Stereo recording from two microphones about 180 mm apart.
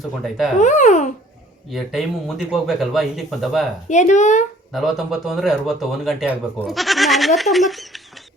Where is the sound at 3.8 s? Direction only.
40° left (ahead or behind).